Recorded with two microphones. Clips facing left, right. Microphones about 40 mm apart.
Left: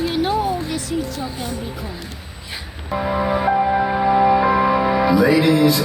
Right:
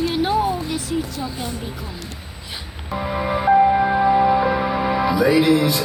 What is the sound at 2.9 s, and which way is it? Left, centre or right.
Music, centre.